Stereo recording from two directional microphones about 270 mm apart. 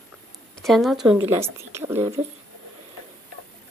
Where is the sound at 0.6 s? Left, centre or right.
Centre.